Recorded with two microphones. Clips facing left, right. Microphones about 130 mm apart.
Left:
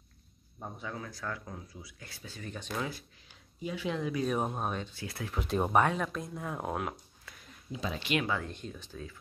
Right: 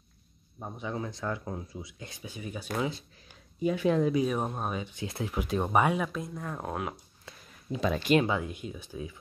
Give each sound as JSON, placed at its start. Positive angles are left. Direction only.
{"t": 0.6, "sound": "speech", "side_deg": -20}
{"t": 3.6, "sound": "speech", "side_deg": -50}
{"t": 4.2, "sound": "speech", "side_deg": 0}
{"t": 4.8, "sound": "speech", "side_deg": -20}
{"t": 5.5, "sound": "speech", "side_deg": 0}
{"t": 7.7, "sound": "speech", "side_deg": -65}
{"t": 8.0, "sound": "speech", "side_deg": -40}
{"t": 8.3, "sound": "speech", "side_deg": -10}